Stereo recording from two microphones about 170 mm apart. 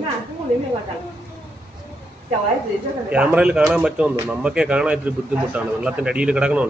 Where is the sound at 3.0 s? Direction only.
5° right (ahead or behind).